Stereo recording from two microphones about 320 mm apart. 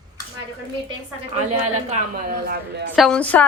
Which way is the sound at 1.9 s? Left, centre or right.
Right.